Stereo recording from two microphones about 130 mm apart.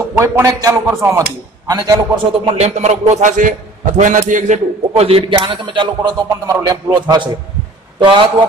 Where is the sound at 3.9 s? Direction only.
75° right (ahead or behind).